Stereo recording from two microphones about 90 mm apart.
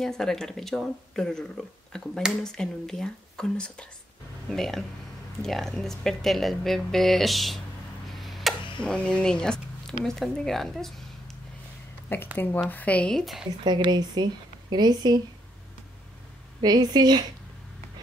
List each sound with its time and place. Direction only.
0.0 s speech: 5° left (ahead or behind)
8.1 s tick-tock: centre (ahead or behind)
8.7 s speech: 10° left (ahead or behind)
12.1 s speech: 25° left (ahead or behind)
13.2 s speech: centre (ahead or behind)
13.7 s speech: 60° right (ahead or behind)
16.6 s speech: 50° right (ahead or behind)